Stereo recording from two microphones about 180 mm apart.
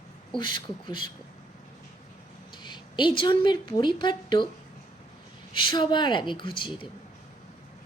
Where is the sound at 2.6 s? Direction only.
25° left (ahead or behind).